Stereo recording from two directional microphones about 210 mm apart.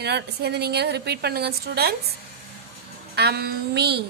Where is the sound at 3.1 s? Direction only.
50° right (ahead or behind).